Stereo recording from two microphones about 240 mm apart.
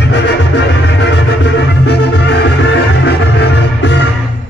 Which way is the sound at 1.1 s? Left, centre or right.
Left.